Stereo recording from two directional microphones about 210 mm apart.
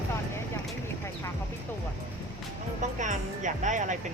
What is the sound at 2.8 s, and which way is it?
Speech, 35° right (ahead or behind).